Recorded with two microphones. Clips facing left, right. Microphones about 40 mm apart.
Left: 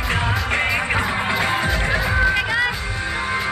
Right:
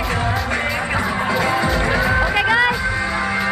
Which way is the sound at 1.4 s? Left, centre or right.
Left.